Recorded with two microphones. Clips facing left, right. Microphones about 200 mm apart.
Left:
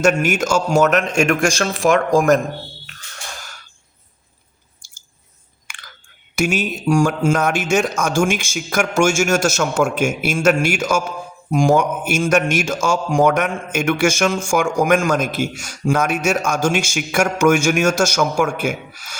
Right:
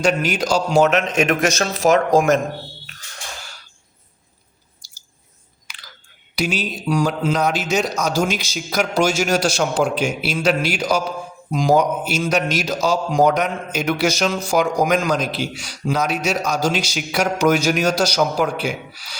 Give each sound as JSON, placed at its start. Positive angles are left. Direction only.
{"t": 0.0, "sound": "a man's voice", "side_deg": 45}
{"t": 1.8, "sound": "speech", "side_deg": -35}
{"t": 5.6, "sound": "chewing", "side_deg": 50}
{"t": 6.3, "sound": "a man's voice", "side_deg": 50}